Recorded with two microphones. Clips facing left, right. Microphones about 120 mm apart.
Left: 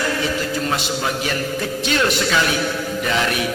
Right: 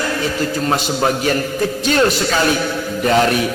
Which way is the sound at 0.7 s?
45° right (ahead or behind).